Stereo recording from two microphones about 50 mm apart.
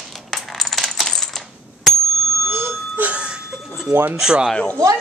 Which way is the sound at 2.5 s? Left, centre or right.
Right.